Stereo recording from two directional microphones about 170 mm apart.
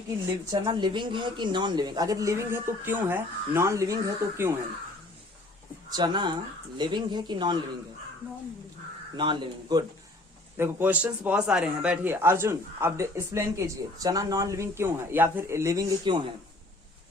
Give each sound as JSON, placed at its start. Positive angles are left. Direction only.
{"t": 0.5, "sound": "a man's voice", "side_deg": -25}
{"t": 5.9, "sound": "speech", "side_deg": -25}
{"t": 9.1, "sound": "speech", "side_deg": -25}
{"t": 10.6, "sound": "a man's voice", "side_deg": -10}